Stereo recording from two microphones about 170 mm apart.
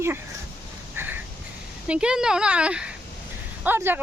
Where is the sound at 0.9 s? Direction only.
15° right (ahead or behind).